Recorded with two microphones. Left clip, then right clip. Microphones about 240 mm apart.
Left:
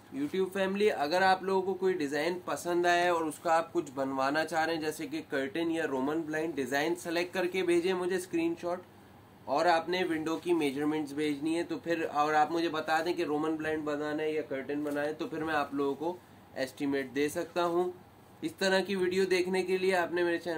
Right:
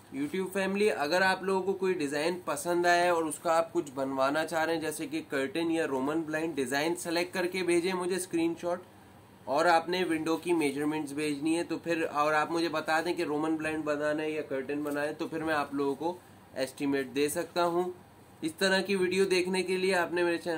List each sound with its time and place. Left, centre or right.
0.2 s speech: centre